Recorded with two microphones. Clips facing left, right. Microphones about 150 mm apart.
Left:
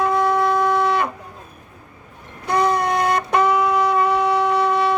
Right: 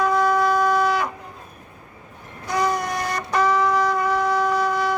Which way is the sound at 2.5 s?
60° left (ahead or behind).